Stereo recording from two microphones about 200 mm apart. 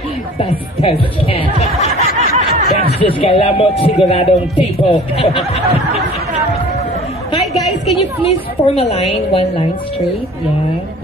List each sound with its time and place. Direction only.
0.4 s a woman's voice: 30° left (ahead or behind)
2.1 s a sound: 30° right (ahead or behind)
2.9 s a man's voice: 30° left (ahead or behind)
8.6 s a woman's voice: 30° left (ahead or behind)